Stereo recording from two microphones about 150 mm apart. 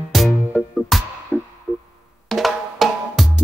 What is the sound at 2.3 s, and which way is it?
Drum, centre (ahead or behind).